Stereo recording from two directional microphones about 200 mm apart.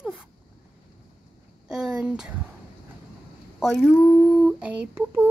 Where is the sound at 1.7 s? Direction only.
5° right (ahead or behind).